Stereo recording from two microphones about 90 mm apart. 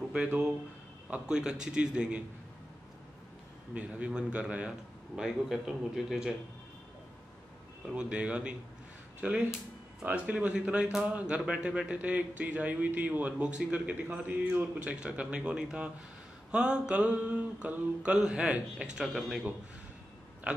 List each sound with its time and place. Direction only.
0.1 s speech: 10° right (ahead or behind)
3.7 s speech: 10° right (ahead or behind)
7.9 s speech: 10° right (ahead or behind)